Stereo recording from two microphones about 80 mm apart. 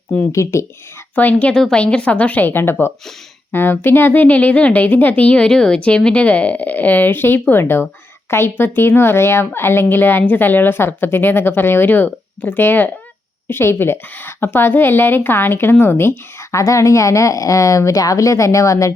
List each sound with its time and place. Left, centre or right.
0.3 s a woman's voice: left
1.1 s a woman's voice: left